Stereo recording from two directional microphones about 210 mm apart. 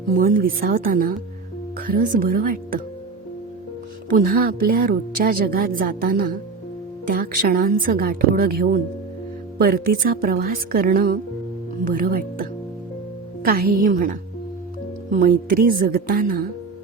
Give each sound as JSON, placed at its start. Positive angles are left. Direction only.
{"t": 0.2, "sound": "a woman's voice", "side_deg": -40}
{"t": 4.1, "sound": "a woman's voice", "side_deg": -45}
{"t": 15.1, "sound": "a woman's voice", "side_deg": -40}